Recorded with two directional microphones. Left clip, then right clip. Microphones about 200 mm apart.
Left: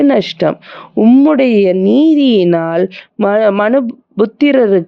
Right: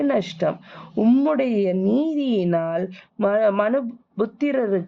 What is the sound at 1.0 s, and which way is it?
A woman's voice, 30° left (ahead or behind).